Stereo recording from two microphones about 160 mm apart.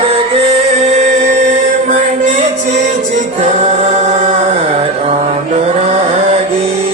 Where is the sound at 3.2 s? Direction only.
45° right (ahead or behind).